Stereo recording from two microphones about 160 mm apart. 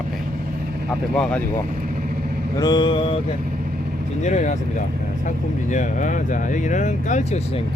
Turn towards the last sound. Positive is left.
turn(degrees=45)  # may be behind; listen again after turning